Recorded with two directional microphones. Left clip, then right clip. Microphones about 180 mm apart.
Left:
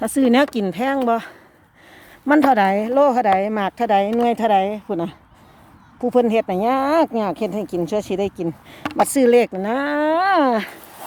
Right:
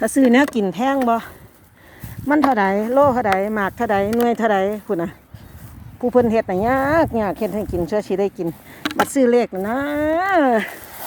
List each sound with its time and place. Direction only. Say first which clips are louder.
0.0 s speech: right 1 dB; 20° left (ahead or behind)
2.2 s speech: left 2 dB; 40° left (ahead or behind)
9.0 s speech: left 2 dB; 40° left (ahead or behind); by 10.7 s 15° left (ahead or behind)